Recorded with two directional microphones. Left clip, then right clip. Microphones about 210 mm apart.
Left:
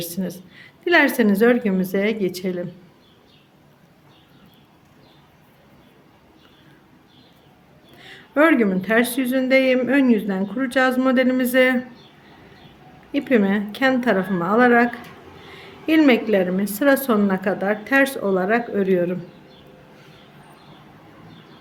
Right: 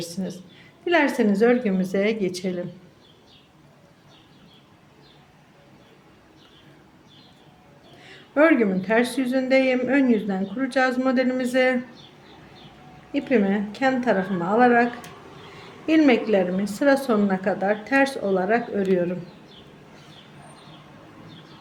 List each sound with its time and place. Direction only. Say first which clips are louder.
0.0 s a woman's voice: left 3 dB; 20° left (ahead or behind)
8.0 s speech: left 1 dB; 15° left (ahead or behind)
13.1 s speech: left 3 dB; 15° left (ahead or behind)
15.9 s speech: left 2 dB; 15° left (ahead or behind)